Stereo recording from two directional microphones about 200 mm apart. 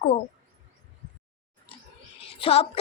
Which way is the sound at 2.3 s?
30° left (ahead or behind).